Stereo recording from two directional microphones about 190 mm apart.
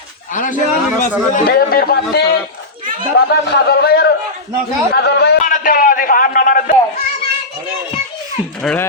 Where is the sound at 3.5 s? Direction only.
55° left (ahead or behind).